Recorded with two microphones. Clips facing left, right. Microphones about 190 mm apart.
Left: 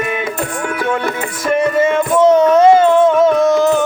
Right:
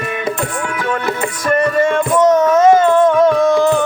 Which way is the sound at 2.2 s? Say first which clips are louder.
Left 2 dB; 30° left (ahead or behind).